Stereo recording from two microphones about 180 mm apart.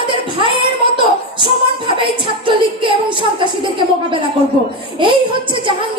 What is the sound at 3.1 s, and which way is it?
Speech, 25° right (ahead or behind).